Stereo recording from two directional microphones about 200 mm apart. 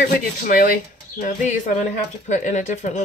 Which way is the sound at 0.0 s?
45° left (ahead or behind).